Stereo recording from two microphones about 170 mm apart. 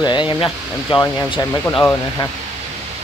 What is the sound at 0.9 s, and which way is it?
Speech, 30° left (ahead or behind).